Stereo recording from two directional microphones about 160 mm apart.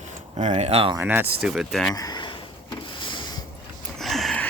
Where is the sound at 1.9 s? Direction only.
25° left (ahead or behind).